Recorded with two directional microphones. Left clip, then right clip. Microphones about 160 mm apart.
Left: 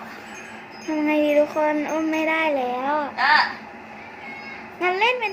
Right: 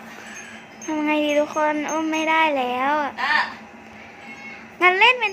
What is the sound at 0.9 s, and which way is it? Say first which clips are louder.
Wind chime: left 1 dB; 10° right (ahead or behind).